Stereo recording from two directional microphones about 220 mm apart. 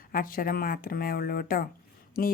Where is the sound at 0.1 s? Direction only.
40° left (ahead or behind).